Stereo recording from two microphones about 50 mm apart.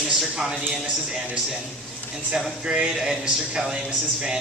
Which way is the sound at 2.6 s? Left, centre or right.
Right.